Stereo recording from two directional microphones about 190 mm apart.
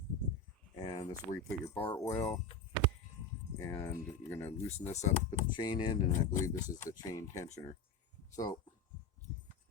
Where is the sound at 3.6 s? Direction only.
10° left (ahead or behind).